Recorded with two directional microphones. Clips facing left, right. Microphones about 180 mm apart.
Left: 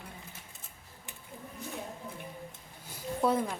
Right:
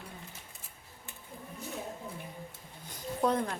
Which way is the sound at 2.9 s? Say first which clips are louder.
Left 1 dB; 5° left (ahead or behind).